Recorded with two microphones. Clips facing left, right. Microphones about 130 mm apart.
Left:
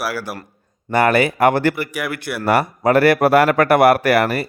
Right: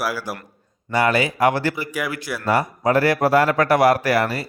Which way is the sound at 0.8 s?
55° left (ahead or behind).